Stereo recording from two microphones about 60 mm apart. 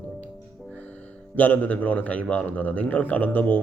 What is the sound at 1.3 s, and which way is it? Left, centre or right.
A man's voice, left.